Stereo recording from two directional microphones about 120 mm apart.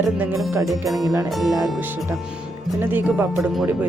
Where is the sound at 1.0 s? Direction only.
25° right (ahead or behind).